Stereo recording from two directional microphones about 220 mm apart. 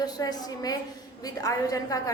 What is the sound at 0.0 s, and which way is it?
A woman's voice, 15° left (ahead or behind).